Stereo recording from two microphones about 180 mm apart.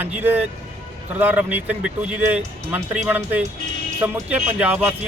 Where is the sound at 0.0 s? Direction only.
10° right (ahead or behind).